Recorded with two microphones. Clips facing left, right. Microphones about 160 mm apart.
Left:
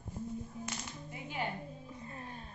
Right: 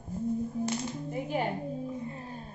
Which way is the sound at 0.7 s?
40° right (ahead or behind).